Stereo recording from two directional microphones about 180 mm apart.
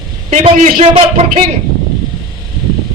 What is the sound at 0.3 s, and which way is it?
Speech, 45° right (ahead or behind).